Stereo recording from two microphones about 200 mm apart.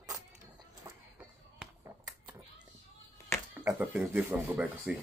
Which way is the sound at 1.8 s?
15° right (ahead or behind).